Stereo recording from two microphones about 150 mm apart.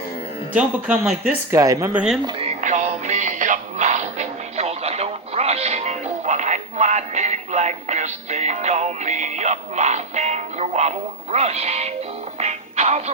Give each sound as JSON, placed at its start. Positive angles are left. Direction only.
{"t": 0.5, "sound": "speech", "side_deg": -10}
{"t": 1.5, "sound": "speech", "side_deg": -20}
{"t": 1.9, "sound": "speech", "side_deg": -10}
{"t": 2.6, "sound": "music", "side_deg": -55}